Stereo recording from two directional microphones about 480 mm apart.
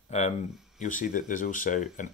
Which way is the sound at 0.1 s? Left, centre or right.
Centre.